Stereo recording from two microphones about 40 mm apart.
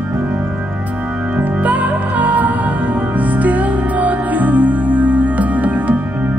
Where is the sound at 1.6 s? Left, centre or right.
Right.